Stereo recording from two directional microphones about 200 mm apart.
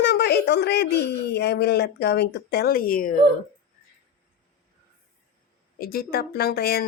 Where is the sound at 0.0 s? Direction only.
55° left (ahead or behind).